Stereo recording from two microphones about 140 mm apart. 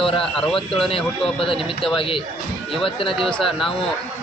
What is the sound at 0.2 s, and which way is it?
Speech, 5° left (ahead or behind).